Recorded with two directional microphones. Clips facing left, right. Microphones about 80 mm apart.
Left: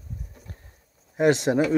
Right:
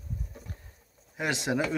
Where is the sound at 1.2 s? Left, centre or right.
Left.